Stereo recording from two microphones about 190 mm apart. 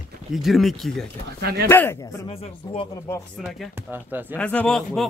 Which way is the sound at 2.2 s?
30° left (ahead or behind).